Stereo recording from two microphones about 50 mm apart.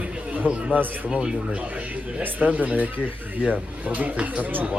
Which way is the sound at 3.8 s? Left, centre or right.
Right.